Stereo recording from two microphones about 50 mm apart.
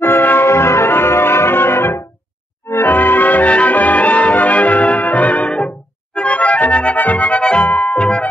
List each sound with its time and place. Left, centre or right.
0.0 s music: left
0.5 s music: left